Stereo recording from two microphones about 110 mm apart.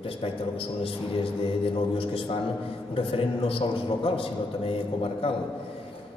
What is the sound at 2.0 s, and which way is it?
A man's voice, 55° left (ahead or behind).